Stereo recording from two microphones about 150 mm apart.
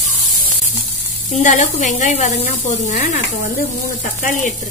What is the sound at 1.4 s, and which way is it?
Speech, 55° left (ahead or behind).